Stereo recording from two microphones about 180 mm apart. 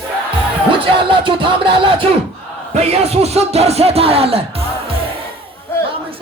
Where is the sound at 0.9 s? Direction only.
30° right (ahead or behind).